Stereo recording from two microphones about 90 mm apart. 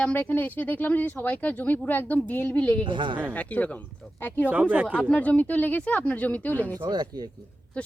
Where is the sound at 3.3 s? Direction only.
15° left (ahead or behind).